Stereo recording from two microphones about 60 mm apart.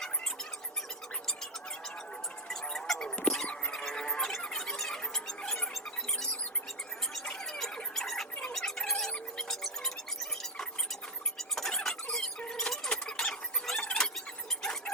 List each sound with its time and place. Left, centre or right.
2.5 s a sound: centre
4.3 s music: centre
7.1 s squeal: centre
7.8 s a sound: centre
8.5 s music: centre
12.1 s squeal: centre